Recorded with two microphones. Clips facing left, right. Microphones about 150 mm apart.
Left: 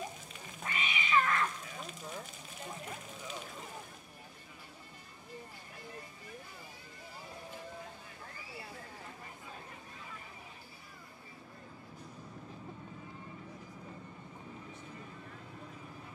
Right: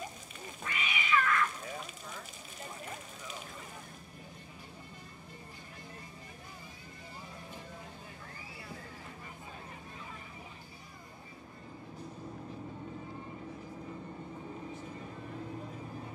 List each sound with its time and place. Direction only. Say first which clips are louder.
0.7 s cat: right 2 dB; 30° left (ahead or behind)